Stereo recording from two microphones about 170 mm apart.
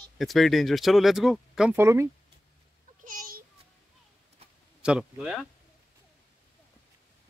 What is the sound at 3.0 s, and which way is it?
Babbling, 50° right (ahead or behind).